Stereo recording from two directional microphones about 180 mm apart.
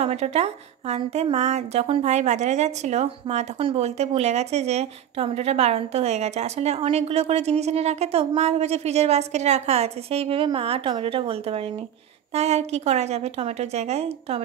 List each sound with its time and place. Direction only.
0.0 s a woman's voice: 35° right (ahead or behind)